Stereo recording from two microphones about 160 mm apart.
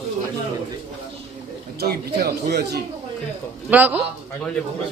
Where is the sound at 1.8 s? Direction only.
75° right (ahead or behind).